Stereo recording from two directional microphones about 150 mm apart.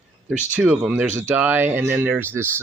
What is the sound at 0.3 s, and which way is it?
Speech, 10° right (ahead or behind).